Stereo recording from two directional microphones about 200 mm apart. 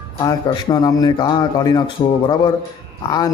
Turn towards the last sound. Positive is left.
turn(degrees=20)  # may be behind; listen again after turning